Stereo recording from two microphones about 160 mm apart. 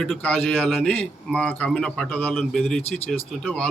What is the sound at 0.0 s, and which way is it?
A man's voice, 5° left (ahead or behind).